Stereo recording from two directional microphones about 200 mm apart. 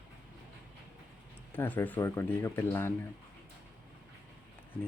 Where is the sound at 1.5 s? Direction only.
10° left (ahead or behind).